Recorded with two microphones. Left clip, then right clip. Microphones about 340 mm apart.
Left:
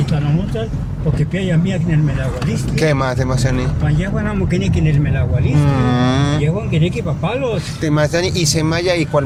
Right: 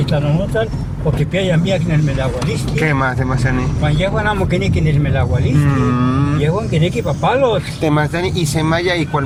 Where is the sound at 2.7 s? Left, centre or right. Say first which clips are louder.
Even; centre.